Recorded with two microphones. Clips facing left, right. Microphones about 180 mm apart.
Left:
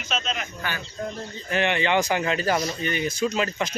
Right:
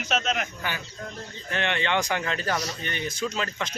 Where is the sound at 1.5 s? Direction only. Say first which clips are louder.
Left 4 dB; 5° left (ahead or behind).